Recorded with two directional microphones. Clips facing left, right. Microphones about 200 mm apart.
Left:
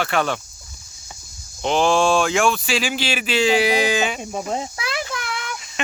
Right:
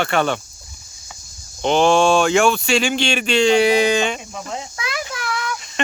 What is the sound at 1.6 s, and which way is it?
Speech, centre (ahead or behind).